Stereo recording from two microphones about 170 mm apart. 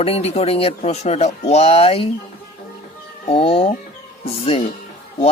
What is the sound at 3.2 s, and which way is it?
Speech, 35° left (ahead or behind).